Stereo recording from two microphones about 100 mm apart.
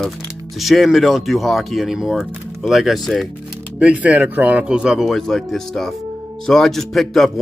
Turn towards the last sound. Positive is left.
turn(degrees=0)  # may be behind; listen again after turning